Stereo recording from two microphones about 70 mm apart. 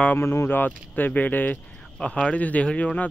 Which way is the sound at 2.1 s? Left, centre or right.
Centre.